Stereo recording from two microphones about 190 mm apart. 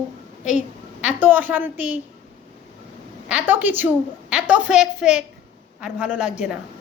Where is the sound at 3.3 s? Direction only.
10° right (ahead or behind).